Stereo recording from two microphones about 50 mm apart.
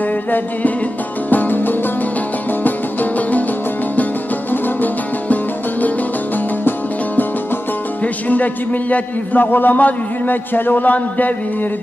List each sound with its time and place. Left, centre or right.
0.3 s a man's voice: left
1.3 s music: left
4.5 s music: left
8.0 s music: left
8.9 s a man's voice: left